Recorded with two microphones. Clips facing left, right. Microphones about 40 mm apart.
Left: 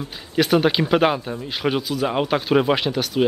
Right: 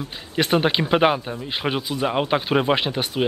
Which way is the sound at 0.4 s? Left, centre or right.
Centre.